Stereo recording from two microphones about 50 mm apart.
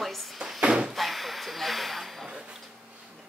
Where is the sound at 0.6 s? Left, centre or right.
Centre.